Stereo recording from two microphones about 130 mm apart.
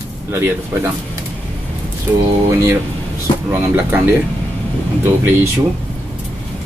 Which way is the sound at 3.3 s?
40° left (ahead or behind).